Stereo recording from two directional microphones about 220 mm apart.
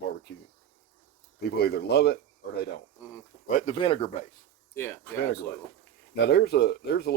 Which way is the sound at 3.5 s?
35° left (ahead or behind).